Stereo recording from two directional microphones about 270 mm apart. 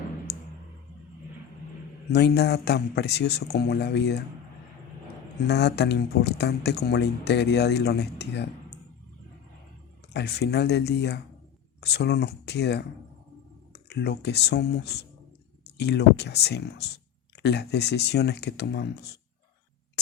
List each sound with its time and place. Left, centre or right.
0.3 s a sound: left
2.1 s speech: left
5.5 s speech: left
10.1 s speech: left